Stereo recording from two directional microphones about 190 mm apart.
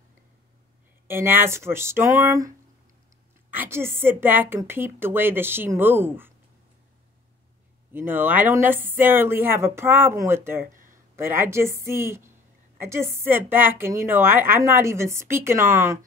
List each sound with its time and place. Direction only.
1.0 s a woman's voice: 10° right (ahead or behind)
7.9 s a woman's voice: 10° right (ahead or behind)
10.6 s a sound: 45° right (ahead or behind)
11.1 s a woman's voice: 10° right (ahead or behind)